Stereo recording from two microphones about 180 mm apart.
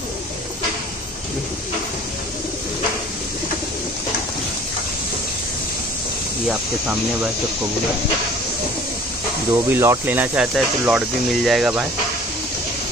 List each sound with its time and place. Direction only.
9.7 s speech: 15° right (ahead or behind)